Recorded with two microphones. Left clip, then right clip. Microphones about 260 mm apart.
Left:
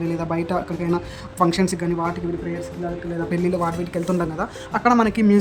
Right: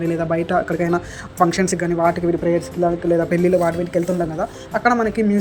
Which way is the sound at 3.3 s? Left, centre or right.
Centre.